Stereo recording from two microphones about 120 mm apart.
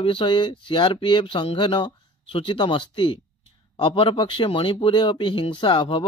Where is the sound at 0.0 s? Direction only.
45° left (ahead or behind).